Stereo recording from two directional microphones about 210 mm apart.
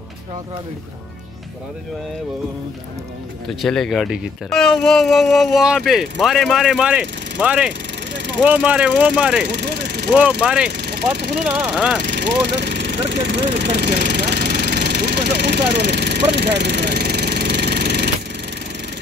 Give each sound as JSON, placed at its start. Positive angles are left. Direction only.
{"t": 3.4, "sound": "speech", "side_deg": 0}
{"t": 9.5, "sound": "speech", "side_deg": -50}
{"t": 10.4, "sound": "speech", "side_deg": -5}
{"t": 10.7, "sound": "speech", "side_deg": -50}
{"t": 11.4, "sound": "speech", "side_deg": -5}
{"t": 12.2, "sound": "vehicle", "side_deg": -50}